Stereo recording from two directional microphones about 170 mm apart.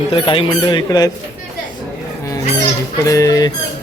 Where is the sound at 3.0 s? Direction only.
20° left (ahead or behind).